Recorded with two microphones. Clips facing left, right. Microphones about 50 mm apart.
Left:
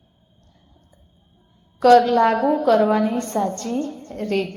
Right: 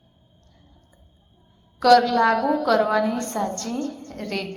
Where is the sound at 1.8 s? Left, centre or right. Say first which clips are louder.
Left 3 dB; left.